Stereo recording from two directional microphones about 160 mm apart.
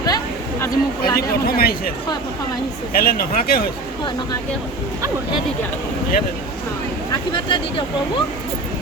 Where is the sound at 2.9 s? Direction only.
65° left (ahead or behind).